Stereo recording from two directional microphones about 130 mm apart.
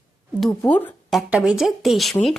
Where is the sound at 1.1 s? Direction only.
Centre (ahead or behind).